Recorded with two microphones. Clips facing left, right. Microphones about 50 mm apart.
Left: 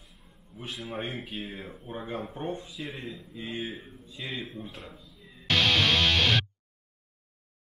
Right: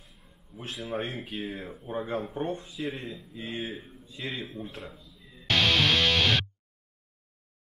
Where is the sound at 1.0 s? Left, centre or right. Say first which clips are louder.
Even; left.